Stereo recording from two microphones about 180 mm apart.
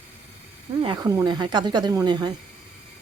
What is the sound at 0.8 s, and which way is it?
Speech, 25° right (ahead or behind).